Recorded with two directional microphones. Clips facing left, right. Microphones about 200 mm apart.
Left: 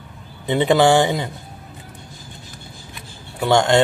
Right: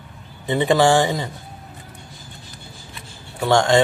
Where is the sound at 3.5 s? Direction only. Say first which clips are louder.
Even; 20° left (ahead or behind).